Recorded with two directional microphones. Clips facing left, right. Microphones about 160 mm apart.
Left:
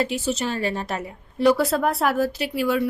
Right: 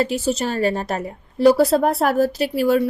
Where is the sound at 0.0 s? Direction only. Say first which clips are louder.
Right 4 dB; 40° right (ahead or behind).